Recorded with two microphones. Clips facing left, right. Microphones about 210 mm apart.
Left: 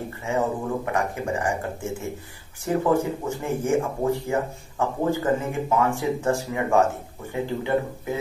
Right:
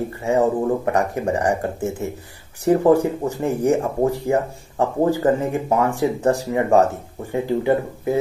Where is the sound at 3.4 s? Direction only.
40° right (ahead or behind).